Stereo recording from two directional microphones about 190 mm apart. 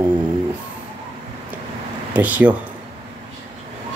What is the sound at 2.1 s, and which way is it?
Speech, 10° right (ahead or behind).